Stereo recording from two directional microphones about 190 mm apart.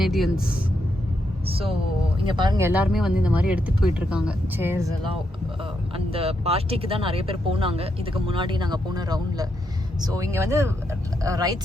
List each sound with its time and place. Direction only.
0.0 s speech: centre (ahead or behind)
2.2 s speech: 25° right (ahead or behind)
2.9 s speech: 5° right (ahead or behind)
6.1 s speech: 30° right (ahead or behind)